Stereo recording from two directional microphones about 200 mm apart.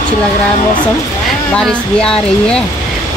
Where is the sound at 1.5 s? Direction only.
5° left (ahead or behind).